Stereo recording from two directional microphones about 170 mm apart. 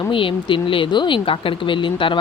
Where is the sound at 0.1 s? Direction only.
30° left (ahead or behind).